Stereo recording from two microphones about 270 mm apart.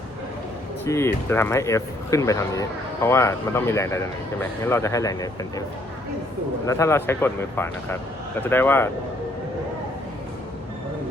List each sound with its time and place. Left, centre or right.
0.9 s speech: centre
6.7 s speech: centre